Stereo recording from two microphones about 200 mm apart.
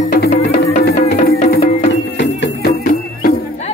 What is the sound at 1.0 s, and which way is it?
Music, 40° left (ahead or behind).